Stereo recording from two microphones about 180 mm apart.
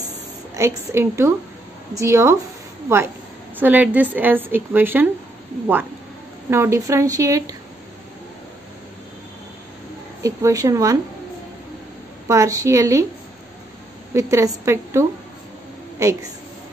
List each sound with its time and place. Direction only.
0.6 s a woman's voice: 15° right (ahead or behind)
3.5 s a woman's voice: 10° right (ahead or behind)
6.5 s a woman's voice: 15° right (ahead or behind)
10.2 s speech: 20° right (ahead or behind)
12.3 s a woman's voice: 20° right (ahead or behind)
14.1 s a woman's voice: 15° right (ahead or behind)